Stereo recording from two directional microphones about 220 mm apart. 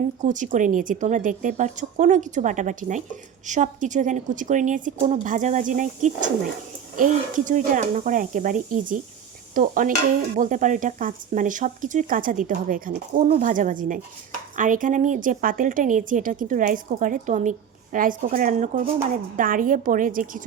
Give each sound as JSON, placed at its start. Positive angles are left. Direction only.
{"t": 0.2, "sound": "speech", "side_deg": -35}